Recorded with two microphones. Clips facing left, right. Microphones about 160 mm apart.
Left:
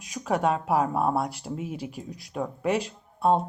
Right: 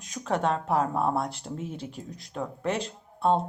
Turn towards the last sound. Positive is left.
turn(degrees=10)  # may be behind; listen again after turning